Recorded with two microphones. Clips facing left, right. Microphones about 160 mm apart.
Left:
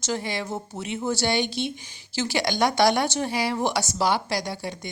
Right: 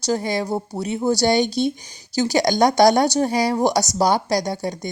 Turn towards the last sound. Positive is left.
turn(degrees=-40)  # may be behind; listen again after turning